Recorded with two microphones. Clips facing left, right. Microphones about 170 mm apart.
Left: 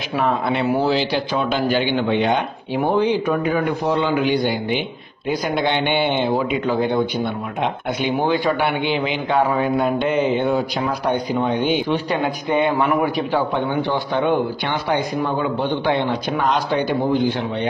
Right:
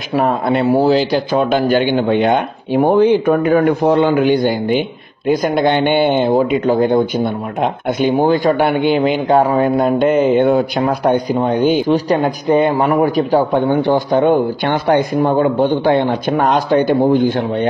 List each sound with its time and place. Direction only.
0.1 s speech: 40° right (ahead or behind)
11.3 s speech: 40° right (ahead or behind)